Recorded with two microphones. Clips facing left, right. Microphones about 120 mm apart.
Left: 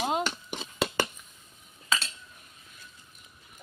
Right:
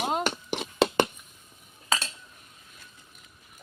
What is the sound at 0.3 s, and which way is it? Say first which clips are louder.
Hands: right 5 dB; 60° right (ahead or behind).